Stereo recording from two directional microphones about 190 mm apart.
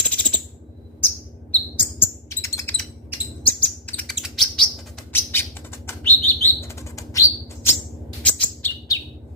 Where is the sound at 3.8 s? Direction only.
5° left (ahead or behind).